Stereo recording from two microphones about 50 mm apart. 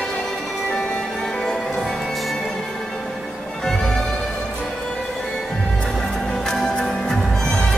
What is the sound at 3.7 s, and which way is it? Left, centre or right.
Music, centre.